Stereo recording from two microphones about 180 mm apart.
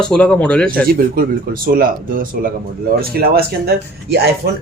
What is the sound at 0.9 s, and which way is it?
A man's voice, 55° right (ahead or behind).